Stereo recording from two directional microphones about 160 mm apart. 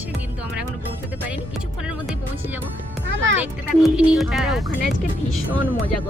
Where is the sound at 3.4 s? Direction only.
10° right (ahead or behind).